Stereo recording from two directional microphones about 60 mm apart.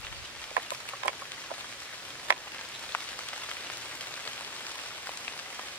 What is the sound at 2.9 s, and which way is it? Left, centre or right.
Rain on surface, left.